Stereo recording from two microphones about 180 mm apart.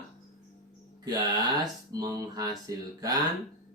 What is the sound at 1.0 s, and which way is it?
Speech, 20° right (ahead or behind).